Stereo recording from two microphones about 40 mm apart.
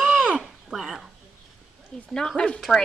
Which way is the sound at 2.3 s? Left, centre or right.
Left.